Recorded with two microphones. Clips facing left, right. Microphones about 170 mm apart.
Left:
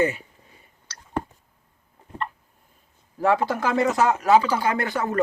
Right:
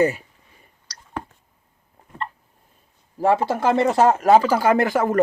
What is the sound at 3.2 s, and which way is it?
A man's voice, 25° right (ahead or behind).